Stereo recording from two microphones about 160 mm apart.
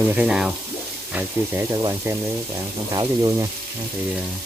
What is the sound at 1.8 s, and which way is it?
Speech, 20° right (ahead or behind).